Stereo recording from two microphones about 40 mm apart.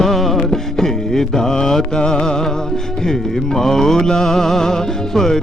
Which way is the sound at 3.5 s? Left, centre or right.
Centre.